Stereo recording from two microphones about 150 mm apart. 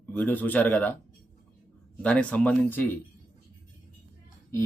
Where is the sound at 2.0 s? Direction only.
10° left (ahead or behind).